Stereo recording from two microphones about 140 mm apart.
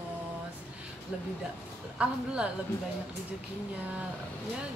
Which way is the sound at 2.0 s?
10° right (ahead or behind).